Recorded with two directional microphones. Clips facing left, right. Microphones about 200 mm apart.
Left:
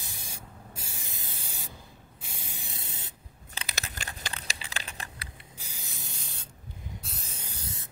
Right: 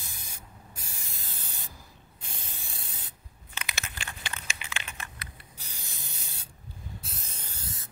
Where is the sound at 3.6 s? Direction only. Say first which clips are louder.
Left 1 dB; 40° left (ahead or behind).